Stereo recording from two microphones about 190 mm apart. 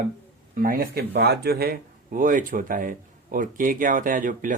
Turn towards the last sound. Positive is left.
turn(degrees=-45)  # may be behind; listen again after turning